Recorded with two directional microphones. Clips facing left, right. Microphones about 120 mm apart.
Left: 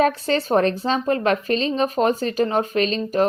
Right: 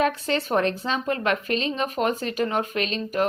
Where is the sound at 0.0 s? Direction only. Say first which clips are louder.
Left 4 dB; 35° left (ahead or behind).